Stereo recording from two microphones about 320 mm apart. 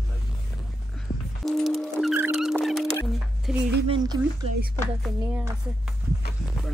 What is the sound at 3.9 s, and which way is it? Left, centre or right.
Speech, centre.